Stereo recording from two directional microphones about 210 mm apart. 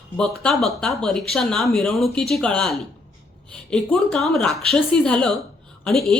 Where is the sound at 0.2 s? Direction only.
Centre (ahead or behind).